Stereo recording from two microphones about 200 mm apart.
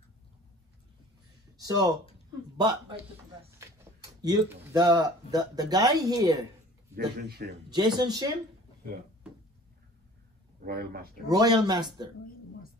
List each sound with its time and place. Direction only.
1.6 s speech: 20° right (ahead or behind)
7.0 s a man's voice: 50° right (ahead or behind)
7.7 s speech: 20° right (ahead or behind)
10.6 s a man's voice: 50° right (ahead or behind)
11.2 s speech: 20° right (ahead or behind)